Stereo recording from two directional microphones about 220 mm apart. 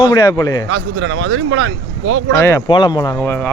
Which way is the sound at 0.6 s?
60° right (ahead or behind).